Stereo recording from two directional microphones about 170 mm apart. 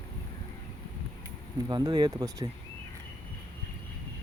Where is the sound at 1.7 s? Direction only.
25° right (ahead or behind).